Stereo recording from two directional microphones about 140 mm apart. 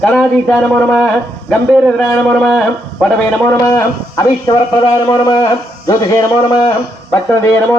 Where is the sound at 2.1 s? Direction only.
5° left (ahead or behind).